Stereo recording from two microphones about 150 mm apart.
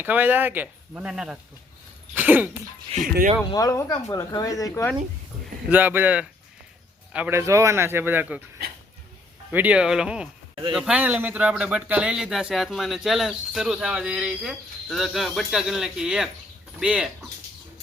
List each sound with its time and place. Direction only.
0.0 s speech: 10° right (ahead or behind)
2.9 s speech: 35° right (ahead or behind)
3.5 s speech: 25° left (ahead or behind)
5.6 s speech: 10° right (ahead or behind)
9.5 s speech: 10° right (ahead or behind)